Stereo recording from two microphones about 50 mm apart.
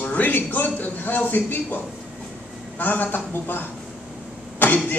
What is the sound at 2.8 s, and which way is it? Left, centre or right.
Speech, left.